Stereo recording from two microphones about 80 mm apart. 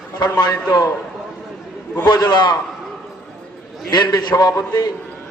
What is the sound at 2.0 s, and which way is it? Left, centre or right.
Speech, left.